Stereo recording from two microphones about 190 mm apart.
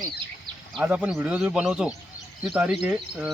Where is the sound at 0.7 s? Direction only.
5° right (ahead or behind).